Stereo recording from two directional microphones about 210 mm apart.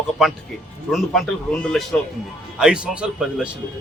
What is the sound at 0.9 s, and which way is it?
A man's voice, centre (ahead or behind).